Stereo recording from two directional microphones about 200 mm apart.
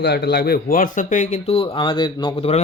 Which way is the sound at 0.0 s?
55° left (ahead or behind).